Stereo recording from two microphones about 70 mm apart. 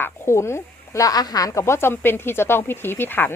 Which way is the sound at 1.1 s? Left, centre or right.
Left.